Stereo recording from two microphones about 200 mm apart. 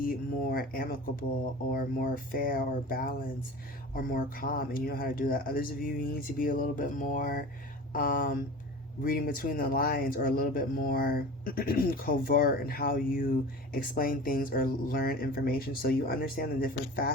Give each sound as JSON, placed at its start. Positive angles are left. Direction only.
{"t": 0.0, "sound": "speech", "side_deg": 45}